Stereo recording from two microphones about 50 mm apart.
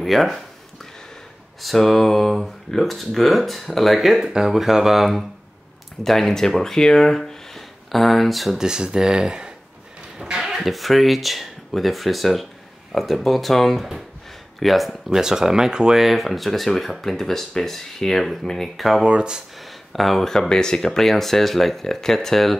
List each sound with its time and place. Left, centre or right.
0.0 s speech: centre
1.6 s speech: centre
8.5 s speech: centre
16.0 s speech: centre
19.0 s speech: centre
19.6 s speech: centre